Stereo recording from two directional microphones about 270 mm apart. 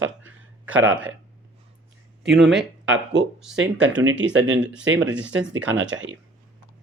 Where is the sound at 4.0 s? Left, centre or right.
Right.